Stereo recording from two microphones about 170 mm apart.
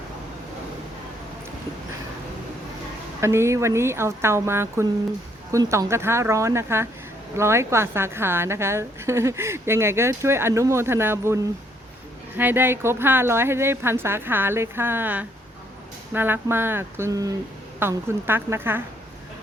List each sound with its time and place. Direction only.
3.2 s a woman's voice: 15° right (ahead or behind)
12.4 s a woman's voice: 10° right (ahead or behind)